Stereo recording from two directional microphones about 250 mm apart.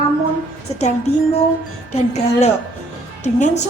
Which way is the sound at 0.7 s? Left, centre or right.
Left.